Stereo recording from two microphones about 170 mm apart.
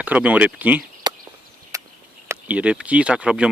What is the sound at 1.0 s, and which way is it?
Chop, 25° right (ahead or behind).